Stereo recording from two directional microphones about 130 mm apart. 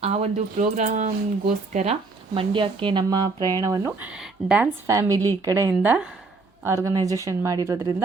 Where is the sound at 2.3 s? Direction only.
40° right (ahead or behind).